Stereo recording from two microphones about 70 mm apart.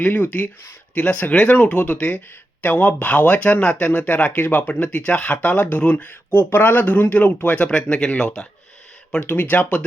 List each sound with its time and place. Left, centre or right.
0.0 s speech: left
9.2 s speech: left